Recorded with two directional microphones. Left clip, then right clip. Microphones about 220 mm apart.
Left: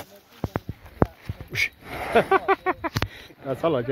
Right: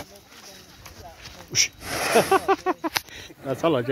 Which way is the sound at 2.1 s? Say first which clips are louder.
Even; 5° left (ahead or behind).